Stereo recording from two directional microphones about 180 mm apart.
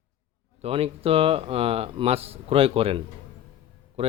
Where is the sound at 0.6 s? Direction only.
35° right (ahead or behind).